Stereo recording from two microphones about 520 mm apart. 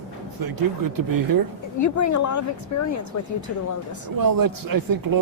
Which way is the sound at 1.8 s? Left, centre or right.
Left.